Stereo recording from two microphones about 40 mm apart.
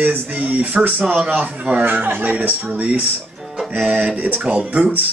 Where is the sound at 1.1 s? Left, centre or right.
Right.